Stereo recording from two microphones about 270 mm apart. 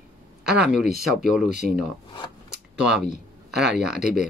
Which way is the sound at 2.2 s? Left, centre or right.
Centre.